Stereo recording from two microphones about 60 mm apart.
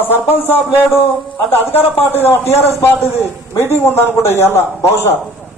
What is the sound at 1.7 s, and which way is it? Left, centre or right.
Speech, left.